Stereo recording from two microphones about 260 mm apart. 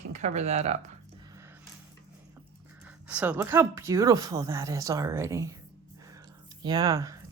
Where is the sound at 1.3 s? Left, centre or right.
Centre.